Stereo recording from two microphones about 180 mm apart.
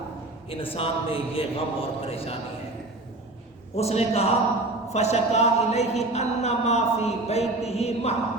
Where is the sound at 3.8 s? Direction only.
35° left (ahead or behind).